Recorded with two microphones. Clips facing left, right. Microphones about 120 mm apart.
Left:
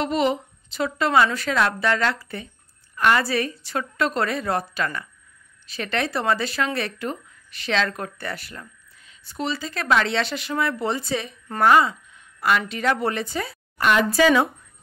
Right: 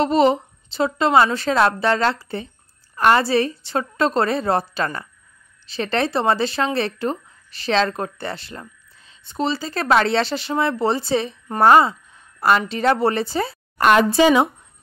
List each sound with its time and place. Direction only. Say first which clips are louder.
0.0 s a woman's voice: right 6 dB; 35° right (ahead or behind)